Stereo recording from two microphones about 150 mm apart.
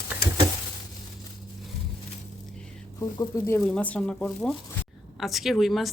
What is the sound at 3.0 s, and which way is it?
Speech, 20° left (ahead or behind).